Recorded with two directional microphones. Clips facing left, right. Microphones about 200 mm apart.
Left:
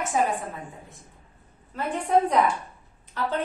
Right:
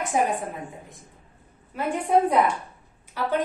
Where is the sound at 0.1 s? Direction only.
15° right (ahead or behind).